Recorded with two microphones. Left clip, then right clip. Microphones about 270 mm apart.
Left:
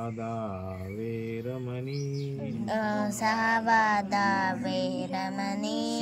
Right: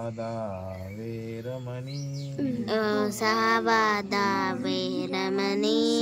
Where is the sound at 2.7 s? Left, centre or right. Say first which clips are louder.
Right 3 dB; centre.